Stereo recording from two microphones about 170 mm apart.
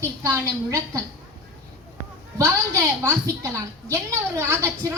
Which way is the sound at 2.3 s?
20° right (ahead or behind).